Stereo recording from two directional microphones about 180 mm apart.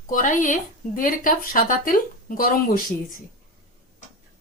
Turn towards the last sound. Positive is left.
turn(degrees=50)  # may be behind; listen again after turning